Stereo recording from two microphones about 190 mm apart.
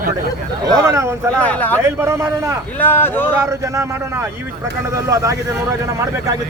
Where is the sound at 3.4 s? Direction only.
15° right (ahead or behind).